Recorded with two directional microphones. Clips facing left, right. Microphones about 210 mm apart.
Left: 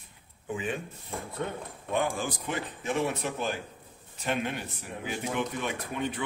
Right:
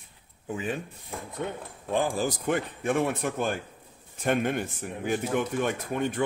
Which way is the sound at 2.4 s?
55° right (ahead or behind).